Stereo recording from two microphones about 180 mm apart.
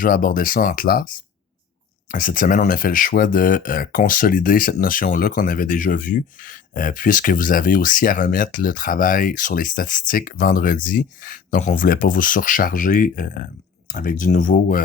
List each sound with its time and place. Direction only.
0.0 s speech: 50° left (ahead or behind)
2.0 s speech: 50° left (ahead or behind)